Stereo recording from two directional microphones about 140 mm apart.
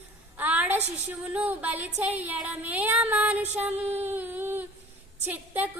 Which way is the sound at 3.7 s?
50° right (ahead or behind).